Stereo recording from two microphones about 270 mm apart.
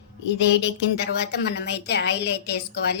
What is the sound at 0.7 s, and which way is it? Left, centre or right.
A woman's voice, left.